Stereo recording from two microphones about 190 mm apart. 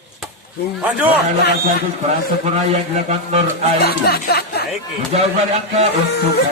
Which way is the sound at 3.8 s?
55° left (ahead or behind).